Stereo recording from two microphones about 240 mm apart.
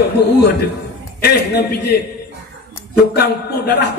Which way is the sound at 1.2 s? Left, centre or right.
Left.